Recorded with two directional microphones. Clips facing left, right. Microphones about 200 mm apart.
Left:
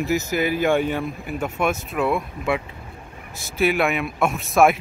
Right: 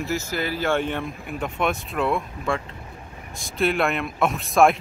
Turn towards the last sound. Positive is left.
turn(degrees=5)  # may be behind; listen again after turning